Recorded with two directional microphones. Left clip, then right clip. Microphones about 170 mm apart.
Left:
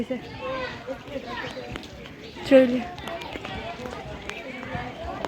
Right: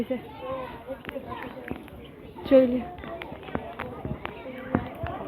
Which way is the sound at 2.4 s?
5° left (ahead or behind).